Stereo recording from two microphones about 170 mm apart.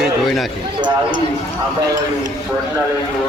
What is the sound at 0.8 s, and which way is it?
Speech, 25° right (ahead or behind).